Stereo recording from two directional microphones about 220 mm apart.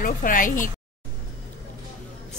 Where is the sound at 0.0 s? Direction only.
40° left (ahead or behind).